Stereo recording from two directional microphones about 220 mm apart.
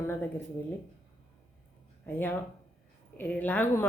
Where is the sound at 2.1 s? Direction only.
10° left (ahead or behind).